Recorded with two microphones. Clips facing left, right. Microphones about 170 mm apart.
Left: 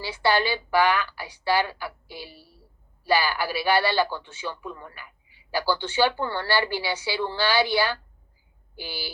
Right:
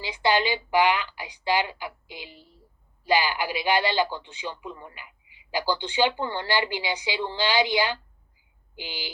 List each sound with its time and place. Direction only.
0.0 s a man's voice: 15° right (ahead or behind)